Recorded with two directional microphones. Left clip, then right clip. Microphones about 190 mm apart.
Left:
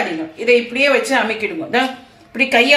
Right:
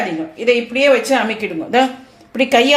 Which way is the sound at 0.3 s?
40° right (ahead or behind).